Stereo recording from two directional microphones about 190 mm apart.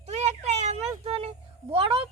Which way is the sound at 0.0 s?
35° right (ahead or behind).